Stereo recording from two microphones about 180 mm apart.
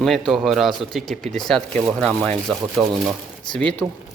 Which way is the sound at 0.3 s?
Centre (ahead or behind).